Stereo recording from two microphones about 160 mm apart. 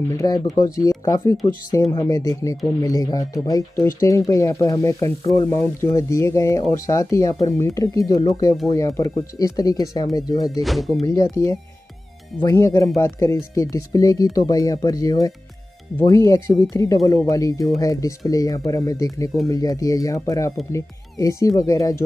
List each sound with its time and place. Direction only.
0.1 s speech: 20° left (ahead or behind)
10.6 s speech: centre (ahead or behind)
11.1 s speech: 20° left (ahead or behind)